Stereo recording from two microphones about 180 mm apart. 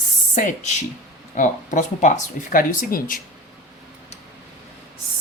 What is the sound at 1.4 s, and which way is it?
Speech, 45° left (ahead or behind).